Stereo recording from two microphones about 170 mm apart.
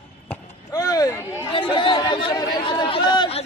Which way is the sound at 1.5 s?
30° left (ahead or behind).